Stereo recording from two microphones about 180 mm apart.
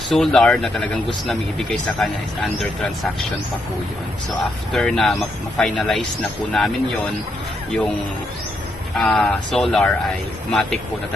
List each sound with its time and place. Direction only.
0.1 s speech: centre (ahead or behind)
4.7 s speech: centre (ahead or behind)
9.0 s speech: 5° left (ahead or behind)